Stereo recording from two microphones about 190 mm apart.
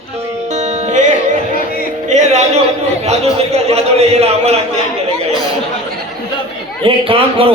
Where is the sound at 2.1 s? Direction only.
35° right (ahead or behind).